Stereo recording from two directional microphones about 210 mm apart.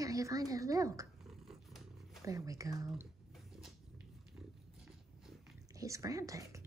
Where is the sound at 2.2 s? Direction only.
15° right (ahead or behind).